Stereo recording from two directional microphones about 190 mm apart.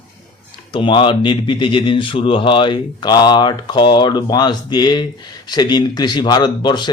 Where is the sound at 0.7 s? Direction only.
25° left (ahead or behind).